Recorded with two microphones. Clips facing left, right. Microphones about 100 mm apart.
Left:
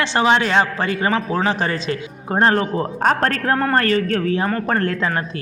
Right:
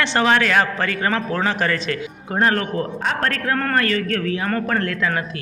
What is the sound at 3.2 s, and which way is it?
A man's voice, 35° left (ahead or behind).